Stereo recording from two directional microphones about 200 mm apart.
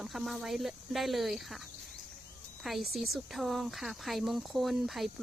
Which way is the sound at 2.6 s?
Centre (ahead or behind).